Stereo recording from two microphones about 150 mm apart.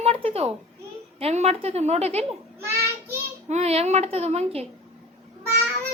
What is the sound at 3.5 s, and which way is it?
A child's voice, 45° right (ahead or behind).